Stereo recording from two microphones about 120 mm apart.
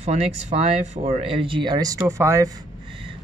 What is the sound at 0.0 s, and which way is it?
Speech, 70° right (ahead or behind).